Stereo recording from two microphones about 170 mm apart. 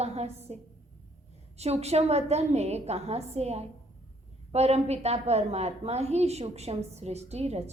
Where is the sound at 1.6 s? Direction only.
40° right (ahead or behind).